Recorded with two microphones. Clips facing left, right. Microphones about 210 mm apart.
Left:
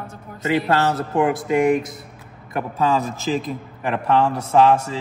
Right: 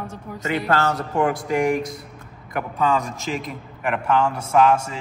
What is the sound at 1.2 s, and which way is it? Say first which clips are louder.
A man's voice: left 3 dB; 20° left (ahead or behind).